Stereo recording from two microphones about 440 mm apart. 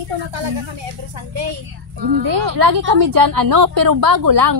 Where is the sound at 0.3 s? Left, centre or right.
Right.